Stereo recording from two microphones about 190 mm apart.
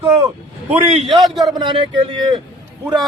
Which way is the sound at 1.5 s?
25° right (ahead or behind).